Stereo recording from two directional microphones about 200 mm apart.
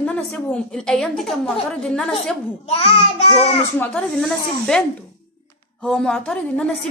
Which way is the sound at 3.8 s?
5° left (ahead or behind).